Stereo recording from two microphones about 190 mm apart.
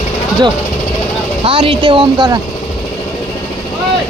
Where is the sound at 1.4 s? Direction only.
30° right (ahead or behind).